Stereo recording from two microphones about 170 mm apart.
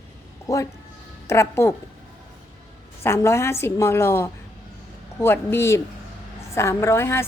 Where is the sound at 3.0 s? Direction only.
15° left (ahead or behind).